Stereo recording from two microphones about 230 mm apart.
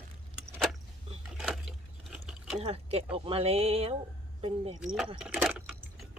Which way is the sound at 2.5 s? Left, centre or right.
Right.